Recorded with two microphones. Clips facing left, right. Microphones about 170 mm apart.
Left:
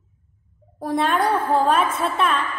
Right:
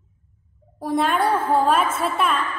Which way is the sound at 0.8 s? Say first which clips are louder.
Even; centre (ahead or behind).